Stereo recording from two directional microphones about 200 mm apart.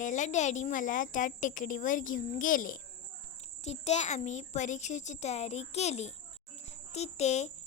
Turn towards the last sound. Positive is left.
turn(degrees=35)  # may be behind; listen again after turning